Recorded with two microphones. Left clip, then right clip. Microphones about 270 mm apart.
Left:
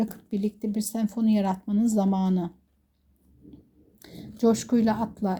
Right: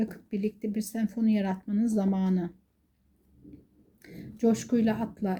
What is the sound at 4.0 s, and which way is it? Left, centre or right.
Speech, left.